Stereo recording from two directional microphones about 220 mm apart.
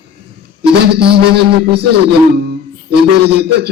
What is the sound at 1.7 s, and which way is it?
A man's voice, 50° right (ahead or behind).